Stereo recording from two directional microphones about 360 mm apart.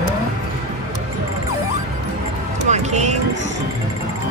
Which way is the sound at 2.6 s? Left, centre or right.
Centre.